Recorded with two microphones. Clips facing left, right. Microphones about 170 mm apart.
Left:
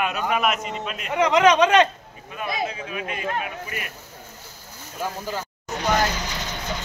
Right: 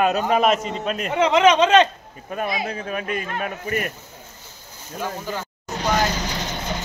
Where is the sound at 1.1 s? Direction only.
20° right (ahead or behind).